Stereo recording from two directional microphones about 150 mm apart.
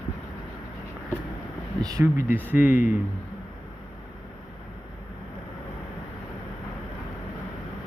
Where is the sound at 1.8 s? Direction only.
20° right (ahead or behind).